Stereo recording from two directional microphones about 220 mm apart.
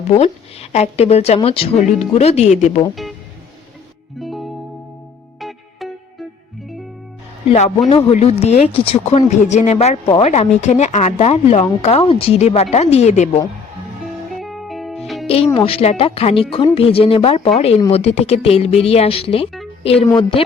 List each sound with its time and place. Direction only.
0.1 s speech: 30° left (ahead or behind)
4.2 s music: centre (ahead or behind)
7.4 s speech: 30° left (ahead or behind)
14.3 s music: centre (ahead or behind)
15.4 s speech: 25° left (ahead or behind)